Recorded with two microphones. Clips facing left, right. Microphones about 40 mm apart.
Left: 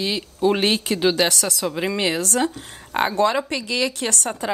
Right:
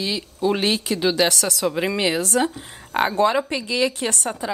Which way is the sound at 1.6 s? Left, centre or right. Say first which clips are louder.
Right 2 dB; centre.